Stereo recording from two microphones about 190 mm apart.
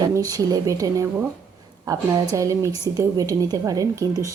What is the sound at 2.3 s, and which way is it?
A woman's voice, 15° right (ahead or behind).